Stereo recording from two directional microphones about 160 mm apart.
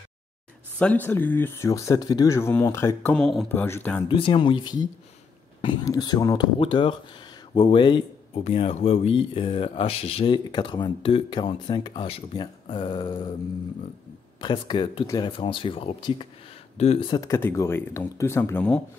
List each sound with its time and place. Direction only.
0.7 s speech: 10° left (ahead or behind)
3.2 s speech: 5° left (ahead or behind)
4.1 s speech: 30° left (ahead or behind)
14.4 s speech: 30° left (ahead or behind)
17.2 s speech: 15° left (ahead or behind)